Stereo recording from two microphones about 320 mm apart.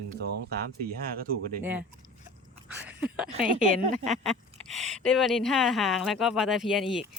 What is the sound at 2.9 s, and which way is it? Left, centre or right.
Speech, centre.